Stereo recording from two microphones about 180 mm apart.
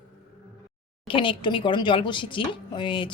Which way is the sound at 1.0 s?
30° left (ahead or behind).